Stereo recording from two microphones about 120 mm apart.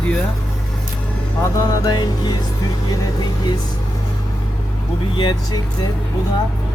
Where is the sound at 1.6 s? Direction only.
30° left (ahead or behind).